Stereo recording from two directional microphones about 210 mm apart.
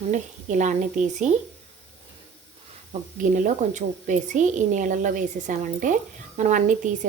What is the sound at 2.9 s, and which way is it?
A woman's voice, 40° right (ahead or behind).